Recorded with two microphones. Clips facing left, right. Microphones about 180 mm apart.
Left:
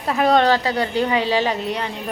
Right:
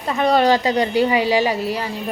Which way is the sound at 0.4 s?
15° right (ahead or behind).